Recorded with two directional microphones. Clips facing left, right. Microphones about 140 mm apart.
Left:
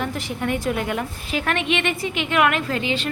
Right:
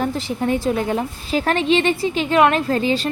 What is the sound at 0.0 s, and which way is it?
A woman's voice, 30° right (ahead or behind).